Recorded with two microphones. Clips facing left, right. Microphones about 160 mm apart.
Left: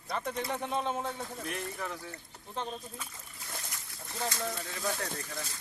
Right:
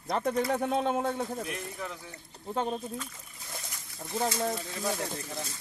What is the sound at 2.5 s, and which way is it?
Speech, 50° right (ahead or behind).